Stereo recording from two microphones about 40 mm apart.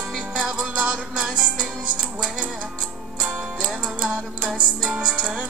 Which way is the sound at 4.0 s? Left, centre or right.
Right.